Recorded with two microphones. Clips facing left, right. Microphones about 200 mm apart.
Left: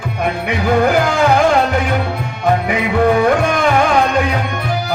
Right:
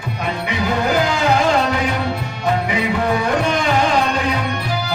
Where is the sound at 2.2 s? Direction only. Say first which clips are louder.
Left 4 dB; 55° left (ahead or behind).